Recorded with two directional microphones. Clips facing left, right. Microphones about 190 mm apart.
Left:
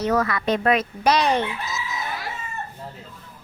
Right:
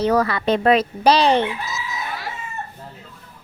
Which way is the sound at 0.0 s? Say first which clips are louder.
Right 3 dB; 30° right (ahead or behind).